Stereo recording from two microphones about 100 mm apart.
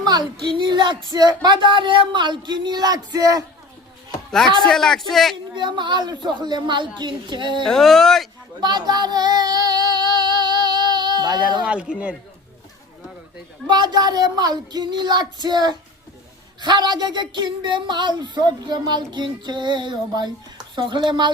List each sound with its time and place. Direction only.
0.0 s speech: 45° right (ahead or behind)
4.6 s a man's voice: 5° left (ahead or behind)
5.5 s speech: 50° right (ahead or behind)
7.6 s a man's voice: 5° left (ahead or behind)
8.6 s child singing: 45° right (ahead or behind)
11.6 s a man's voice: 10° right (ahead or behind)
13.7 s speech: 45° right (ahead or behind)